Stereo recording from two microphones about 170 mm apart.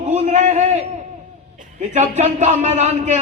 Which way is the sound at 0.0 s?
40° right (ahead or behind).